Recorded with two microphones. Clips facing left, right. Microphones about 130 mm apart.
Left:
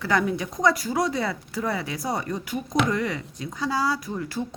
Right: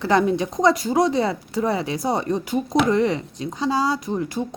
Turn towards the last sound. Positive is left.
turn(degrees=-20)  # may be behind; listen again after turning